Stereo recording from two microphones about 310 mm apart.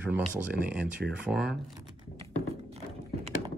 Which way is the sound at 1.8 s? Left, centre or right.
Centre.